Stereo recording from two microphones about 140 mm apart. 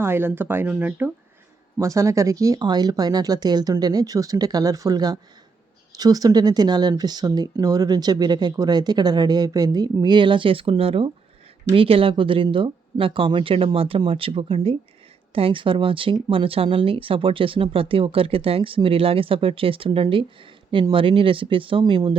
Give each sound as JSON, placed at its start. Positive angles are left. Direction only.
{"t": 0.0, "sound": "speech", "side_deg": -15}